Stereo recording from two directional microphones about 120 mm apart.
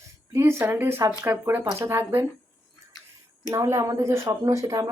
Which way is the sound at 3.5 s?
25° right (ahead or behind).